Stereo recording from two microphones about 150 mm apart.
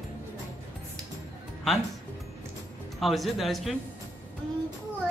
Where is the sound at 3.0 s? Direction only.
Centre (ahead or behind).